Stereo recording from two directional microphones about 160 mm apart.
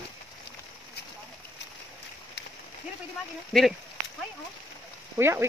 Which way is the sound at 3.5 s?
Centre (ahead or behind).